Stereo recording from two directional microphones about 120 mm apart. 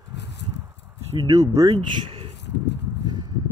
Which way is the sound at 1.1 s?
30° right (ahead or behind).